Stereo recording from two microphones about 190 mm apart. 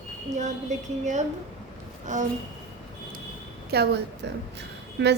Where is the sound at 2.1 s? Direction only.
40° right (ahead or behind).